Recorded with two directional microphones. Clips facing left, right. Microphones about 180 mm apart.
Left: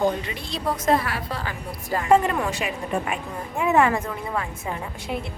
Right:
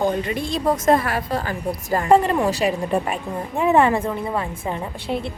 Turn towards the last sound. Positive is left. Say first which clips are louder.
# right 4 dB
turn(degrees=-30)  # may be behind; listen again after turning